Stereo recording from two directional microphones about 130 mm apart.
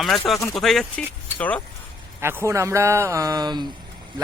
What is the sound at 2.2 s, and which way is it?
Speech, 20° right (ahead or behind).